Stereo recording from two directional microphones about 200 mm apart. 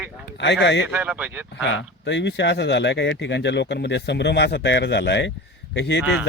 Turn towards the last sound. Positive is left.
turn(degrees=-5)  # may be behind; listen again after turning